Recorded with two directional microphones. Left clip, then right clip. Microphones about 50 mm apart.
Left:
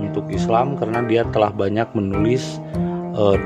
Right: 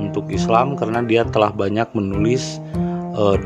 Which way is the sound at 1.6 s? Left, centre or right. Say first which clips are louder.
Even; right.